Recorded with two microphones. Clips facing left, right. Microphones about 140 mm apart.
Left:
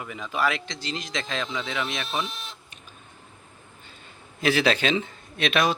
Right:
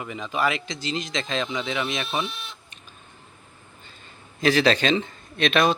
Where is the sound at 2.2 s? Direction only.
40° left (ahead or behind).